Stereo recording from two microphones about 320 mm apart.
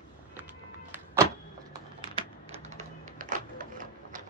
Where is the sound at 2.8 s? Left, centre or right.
Right.